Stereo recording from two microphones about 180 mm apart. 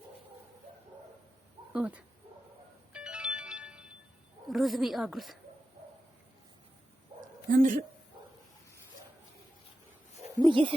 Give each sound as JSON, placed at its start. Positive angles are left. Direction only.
{"t": 1.7, "sound": "speech", "side_deg": -5}
{"t": 2.9, "sound": "music", "side_deg": -5}
{"t": 4.4, "sound": "speech", "side_deg": 0}
{"t": 7.5, "sound": "speech", "side_deg": -50}
{"t": 10.4, "sound": "a sound", "side_deg": -25}